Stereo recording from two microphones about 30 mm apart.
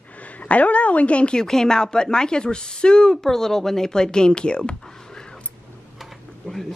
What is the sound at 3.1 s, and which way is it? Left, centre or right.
Speech, centre.